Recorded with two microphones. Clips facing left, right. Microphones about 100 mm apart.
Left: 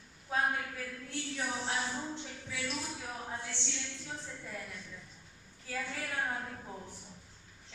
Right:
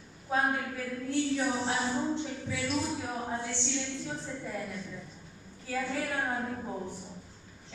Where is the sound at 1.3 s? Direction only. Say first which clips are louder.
Right 6 dB; 25° right (ahead or behind).